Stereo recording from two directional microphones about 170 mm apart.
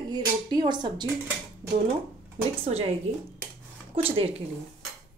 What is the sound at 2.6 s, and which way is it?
Speech, 35° right (ahead or behind).